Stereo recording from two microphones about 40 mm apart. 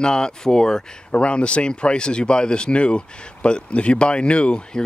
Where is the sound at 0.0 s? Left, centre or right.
Centre.